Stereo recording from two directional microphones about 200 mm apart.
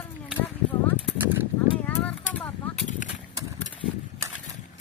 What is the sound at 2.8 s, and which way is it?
Horse, 40° left (ahead or behind).